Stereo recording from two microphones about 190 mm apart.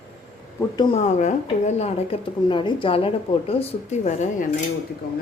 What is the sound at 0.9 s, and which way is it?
Speech, 40° left (ahead or behind).